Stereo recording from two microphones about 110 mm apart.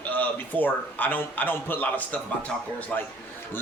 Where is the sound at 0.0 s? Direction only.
15° left (ahead or behind).